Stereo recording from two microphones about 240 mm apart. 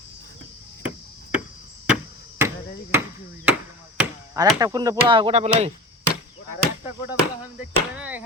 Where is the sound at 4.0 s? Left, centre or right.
Centre.